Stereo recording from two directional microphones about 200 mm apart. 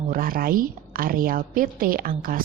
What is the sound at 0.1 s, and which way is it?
Speech, 45° right (ahead or behind).